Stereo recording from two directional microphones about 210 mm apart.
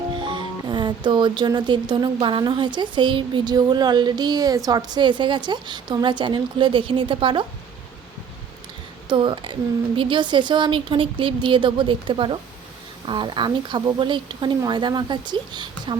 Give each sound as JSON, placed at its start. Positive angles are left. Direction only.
{"t": 0.2, "sound": "speech", "side_deg": -20}
{"t": 9.0, "sound": "speech", "side_deg": -25}